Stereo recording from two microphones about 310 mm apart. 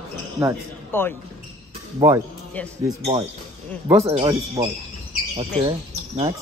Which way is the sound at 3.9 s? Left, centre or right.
Centre.